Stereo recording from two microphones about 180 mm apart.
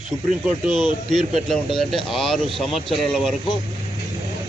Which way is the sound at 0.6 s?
25° left (ahead or behind).